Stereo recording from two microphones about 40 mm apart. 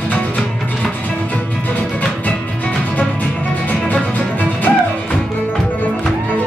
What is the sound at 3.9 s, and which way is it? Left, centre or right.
Music, left.